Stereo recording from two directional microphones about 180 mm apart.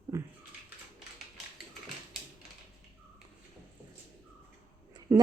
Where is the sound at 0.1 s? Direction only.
15° right (ahead or behind).